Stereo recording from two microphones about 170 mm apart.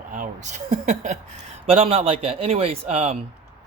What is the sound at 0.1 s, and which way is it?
Speech, 50° right (ahead or behind).